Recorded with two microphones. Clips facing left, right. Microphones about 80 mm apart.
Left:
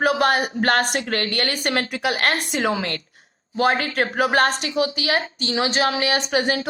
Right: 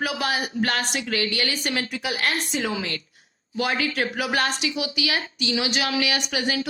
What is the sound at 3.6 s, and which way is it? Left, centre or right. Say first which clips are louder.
A woman's voice: left 5 dB; left.